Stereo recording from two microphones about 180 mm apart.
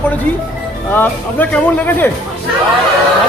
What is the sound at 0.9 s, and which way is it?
Speech, 10° left (ahead or behind).